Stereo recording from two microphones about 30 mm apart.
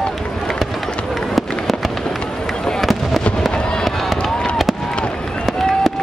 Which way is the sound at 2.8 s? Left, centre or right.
Centre.